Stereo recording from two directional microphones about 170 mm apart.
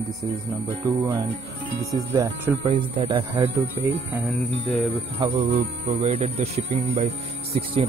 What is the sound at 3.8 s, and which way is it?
Speech, 20° right (ahead or behind).